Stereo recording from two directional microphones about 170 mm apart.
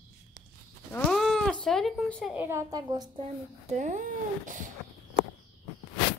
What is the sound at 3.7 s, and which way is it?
Speech, 45° right (ahead or behind).